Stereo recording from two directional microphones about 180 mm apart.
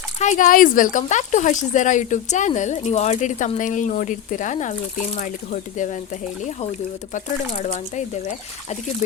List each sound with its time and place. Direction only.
0.2 s speech: 45° left (ahead or behind)